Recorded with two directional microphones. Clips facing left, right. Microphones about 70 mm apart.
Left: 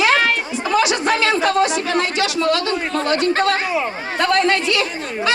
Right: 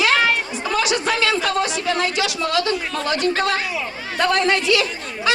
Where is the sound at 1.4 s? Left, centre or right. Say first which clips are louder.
Left 5 dB; centre.